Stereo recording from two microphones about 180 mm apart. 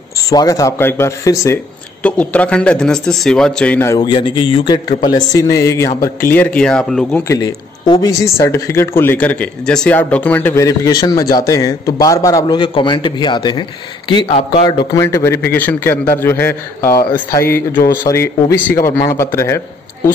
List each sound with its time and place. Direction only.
0.3 s speech: 20° left (ahead or behind)
2.0 s speech: 5° left (ahead or behind)
7.3 s speech: 20° left (ahead or behind)